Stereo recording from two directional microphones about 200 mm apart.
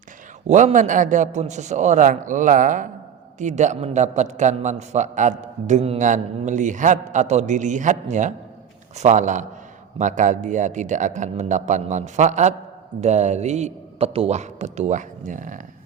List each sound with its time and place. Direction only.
0.4 s a man's voice: 40° right (ahead or behind)